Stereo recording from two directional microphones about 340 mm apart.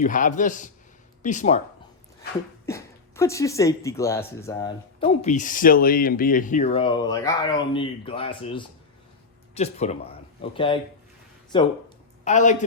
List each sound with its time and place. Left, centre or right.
0.0 s a man's voice: left
2.6 s a man's voice: centre